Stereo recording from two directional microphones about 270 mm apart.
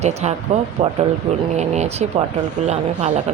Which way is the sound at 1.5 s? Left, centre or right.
Right.